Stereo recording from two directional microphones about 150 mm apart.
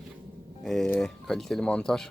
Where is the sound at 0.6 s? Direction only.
5° left (ahead or behind).